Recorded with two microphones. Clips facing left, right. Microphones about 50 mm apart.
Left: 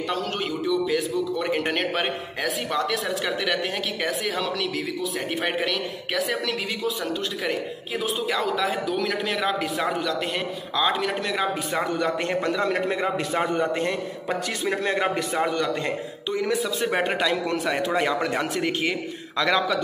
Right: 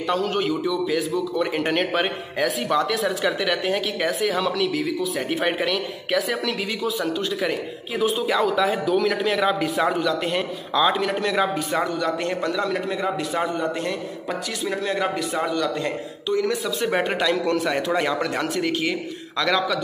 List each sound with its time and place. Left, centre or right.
0.1 s a man's voice: centre
8.0 s a man's voice: centre
11.9 s a man's voice: left
15.8 s a man's voice: centre